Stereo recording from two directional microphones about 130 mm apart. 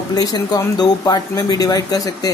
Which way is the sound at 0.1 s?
30° left (ahead or behind).